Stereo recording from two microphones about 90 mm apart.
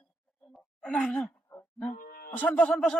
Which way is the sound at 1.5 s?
25° left (ahead or behind).